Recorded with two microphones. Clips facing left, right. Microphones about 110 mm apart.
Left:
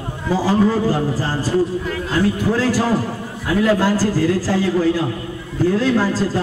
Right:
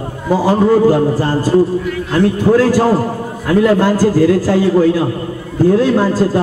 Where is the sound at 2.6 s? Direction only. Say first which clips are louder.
Right 6 dB; 50° right (ahead or behind).